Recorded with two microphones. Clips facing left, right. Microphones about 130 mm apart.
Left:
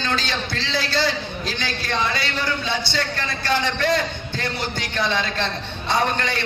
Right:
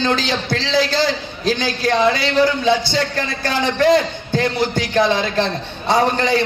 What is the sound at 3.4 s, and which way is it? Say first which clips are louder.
A man's voice: right 6 dB; 45° right (ahead or behind).